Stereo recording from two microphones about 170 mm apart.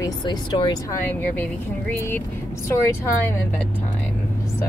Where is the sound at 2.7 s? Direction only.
15° left (ahead or behind).